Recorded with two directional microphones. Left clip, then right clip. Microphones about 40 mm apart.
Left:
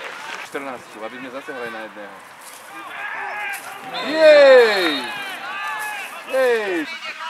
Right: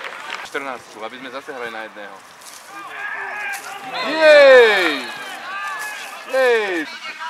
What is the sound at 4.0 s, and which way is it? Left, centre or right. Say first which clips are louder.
Speech: right 1 dB; right.